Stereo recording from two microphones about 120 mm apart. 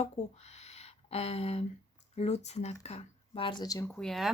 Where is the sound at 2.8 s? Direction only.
55° left (ahead or behind).